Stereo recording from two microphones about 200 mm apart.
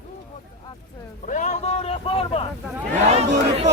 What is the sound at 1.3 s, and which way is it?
Vehicle, 40° left (ahead or behind).